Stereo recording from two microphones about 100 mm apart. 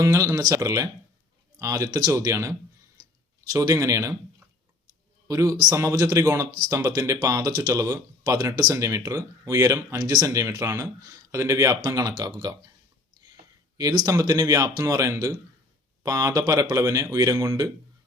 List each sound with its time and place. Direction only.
0.0 s speech: 30° right (ahead or behind)
5.3 s speech: 30° right (ahead or behind)
6.2 s speech: 30° right (ahead or behind)
10.0 s speech: 40° right (ahead or behind)
13.7 s speech: 35° right (ahead or behind)